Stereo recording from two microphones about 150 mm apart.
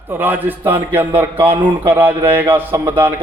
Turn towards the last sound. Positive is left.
turn(degrees=-15)  # may be behind; listen again after turning